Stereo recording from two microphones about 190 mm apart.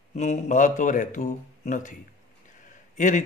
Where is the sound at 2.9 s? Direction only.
40° left (ahead or behind).